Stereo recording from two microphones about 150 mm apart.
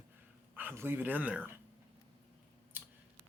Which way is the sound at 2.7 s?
15° right (ahead or behind).